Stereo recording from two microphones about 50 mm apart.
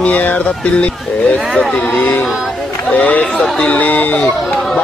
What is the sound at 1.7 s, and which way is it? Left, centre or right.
Speech, left.